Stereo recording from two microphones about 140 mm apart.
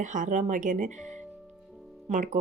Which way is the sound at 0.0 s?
65° right (ahead or behind).